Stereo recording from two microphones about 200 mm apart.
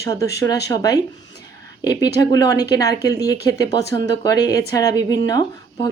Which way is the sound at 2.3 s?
20° left (ahead or behind).